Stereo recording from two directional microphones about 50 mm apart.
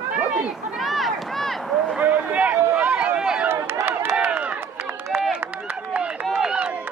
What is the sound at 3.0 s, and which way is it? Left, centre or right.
Run, centre.